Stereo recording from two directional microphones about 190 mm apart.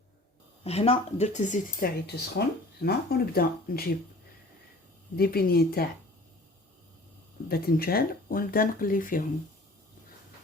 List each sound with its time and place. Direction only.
0.6 s speech: 35° left (ahead or behind); by 3.9 s 55° left (ahead or behind)
5.1 s speech: 55° left (ahead or behind)
7.4 s speech: 55° left (ahead or behind)